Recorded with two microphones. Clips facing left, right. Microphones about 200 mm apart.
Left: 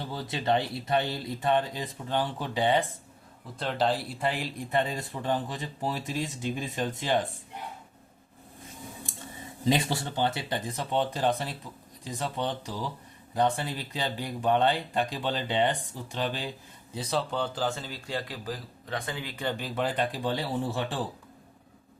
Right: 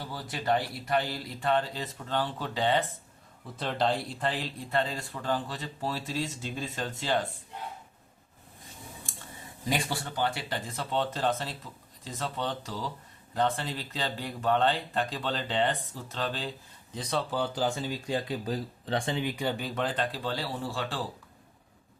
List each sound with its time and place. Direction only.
0.0 s speech: 25° left (ahead or behind)
3.6 s speech: centre (ahead or behind)
9.6 s speech: 25° left (ahead or behind); by 17.2 s 5° left (ahead or behind)
17.3 s speech: 10° right (ahead or behind); by 19.3 s 25° right (ahead or behind)
19.4 s speech: 5° right (ahead or behind); by 21.0 s 20° left (ahead or behind)